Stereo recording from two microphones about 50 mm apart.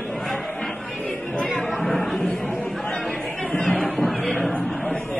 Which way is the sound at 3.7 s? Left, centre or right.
Left.